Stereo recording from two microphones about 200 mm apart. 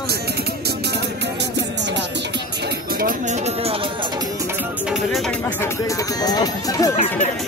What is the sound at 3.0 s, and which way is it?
Speech, 35° right (ahead or behind).